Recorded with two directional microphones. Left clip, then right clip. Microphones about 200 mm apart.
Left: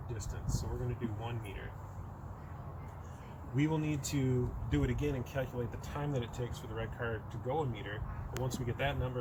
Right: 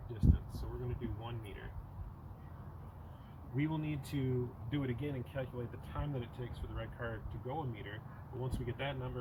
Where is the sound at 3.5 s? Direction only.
15° left (ahead or behind).